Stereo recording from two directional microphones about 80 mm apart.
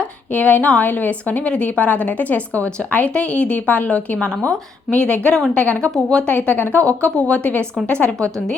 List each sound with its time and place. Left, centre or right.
0.0 s a woman's voice: centre
6.3 s a woman's voice: left